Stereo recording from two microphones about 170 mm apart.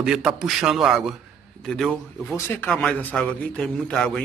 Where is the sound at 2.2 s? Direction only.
15° left (ahead or behind).